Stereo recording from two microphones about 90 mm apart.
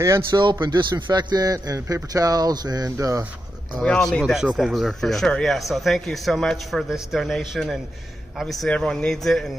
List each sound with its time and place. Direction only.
0.3 s a man's voice: 55° right (ahead or behind); by 3.3 s 40° right (ahead or behind)
3.8 s speech: 5° left (ahead or behind)